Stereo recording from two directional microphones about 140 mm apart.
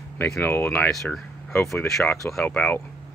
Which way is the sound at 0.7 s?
5° left (ahead or behind).